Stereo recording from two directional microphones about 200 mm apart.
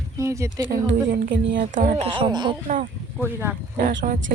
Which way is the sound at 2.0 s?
25° right (ahead or behind).